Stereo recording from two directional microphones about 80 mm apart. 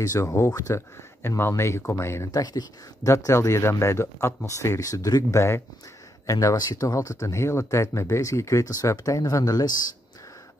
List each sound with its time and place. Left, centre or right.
0.0 s speech: left
1.5 s speech: left
2.3 s speech: left
6.2 s speech: left